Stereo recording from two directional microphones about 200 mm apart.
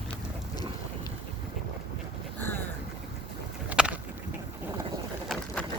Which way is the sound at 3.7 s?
5° right (ahead or behind).